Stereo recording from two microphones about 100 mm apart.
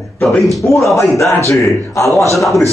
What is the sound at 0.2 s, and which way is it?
Speech, centre (ahead or behind).